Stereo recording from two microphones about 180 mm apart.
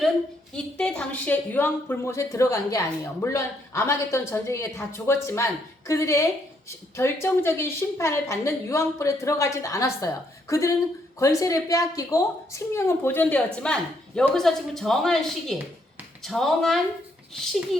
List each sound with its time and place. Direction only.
0.5 s a woman's voice: 5° left (ahead or behind)